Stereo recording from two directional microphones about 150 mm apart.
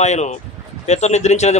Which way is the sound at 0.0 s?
50° left (ahead or behind).